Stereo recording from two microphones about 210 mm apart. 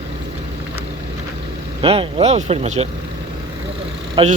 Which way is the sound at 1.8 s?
25° right (ahead or behind).